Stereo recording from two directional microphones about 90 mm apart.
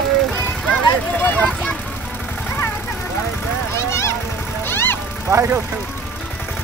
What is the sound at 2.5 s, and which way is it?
Vehicle, 25° left (ahead or behind).